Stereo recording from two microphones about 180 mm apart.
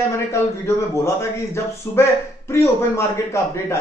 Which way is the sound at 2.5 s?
15° left (ahead or behind).